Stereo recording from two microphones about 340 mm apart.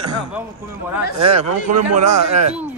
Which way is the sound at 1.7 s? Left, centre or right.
Right.